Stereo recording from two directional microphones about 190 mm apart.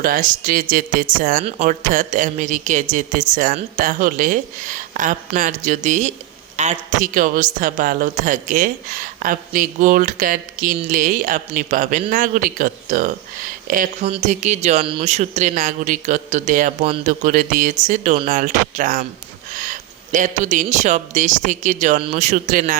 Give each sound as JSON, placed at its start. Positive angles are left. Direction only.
{"t": 0.0, "sound": "speech", "side_deg": -45}
{"t": 20.1, "sound": "speech", "side_deg": -40}